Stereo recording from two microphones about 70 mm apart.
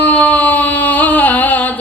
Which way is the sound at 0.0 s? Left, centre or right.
Left.